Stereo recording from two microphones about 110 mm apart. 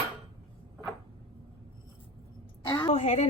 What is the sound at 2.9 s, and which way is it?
Speech, 90° left.